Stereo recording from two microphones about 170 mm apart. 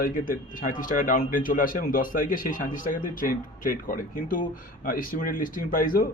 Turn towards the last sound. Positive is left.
turn(degrees=55)  # may be behind; listen again after turning